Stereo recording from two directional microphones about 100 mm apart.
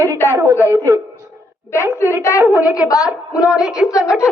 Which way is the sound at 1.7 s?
30° left (ahead or behind).